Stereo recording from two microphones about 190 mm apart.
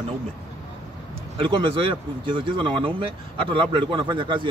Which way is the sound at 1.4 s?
25° right (ahead or behind).